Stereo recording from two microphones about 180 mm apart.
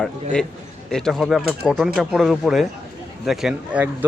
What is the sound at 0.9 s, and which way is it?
Speech, 5° left (ahead or behind).